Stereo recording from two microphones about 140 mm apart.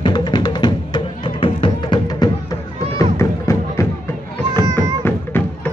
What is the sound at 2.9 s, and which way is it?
Music, 20° left (ahead or behind).